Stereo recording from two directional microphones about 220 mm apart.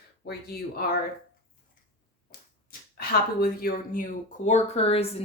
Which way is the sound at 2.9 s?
45° left (ahead or behind).